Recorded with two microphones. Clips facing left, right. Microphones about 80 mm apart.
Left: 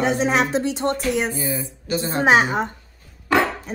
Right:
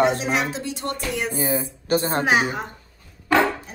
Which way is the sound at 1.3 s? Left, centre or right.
Right.